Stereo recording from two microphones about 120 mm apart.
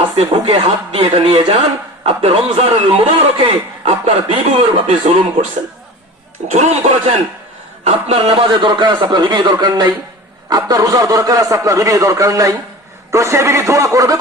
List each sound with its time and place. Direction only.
0.0 s a man's voice: 50° right (ahead or behind)
6.5 s speech: 70° right (ahead or behind)
7.9 s a man's voice: 55° right (ahead or behind); by 14.2 s 30° right (ahead or behind)